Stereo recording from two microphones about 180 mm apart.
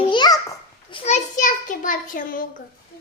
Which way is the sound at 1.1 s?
40° left (ahead or behind).